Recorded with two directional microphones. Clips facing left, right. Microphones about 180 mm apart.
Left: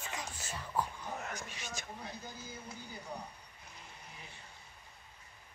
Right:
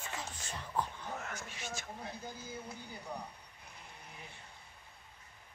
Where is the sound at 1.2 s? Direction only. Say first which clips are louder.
Even; 15° left (ahead or behind).